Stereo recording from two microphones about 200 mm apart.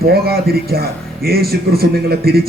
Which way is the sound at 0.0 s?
50° right (ahead or behind).